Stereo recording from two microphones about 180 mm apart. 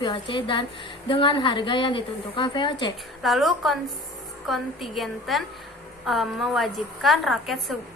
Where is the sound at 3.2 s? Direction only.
Centre (ahead or behind).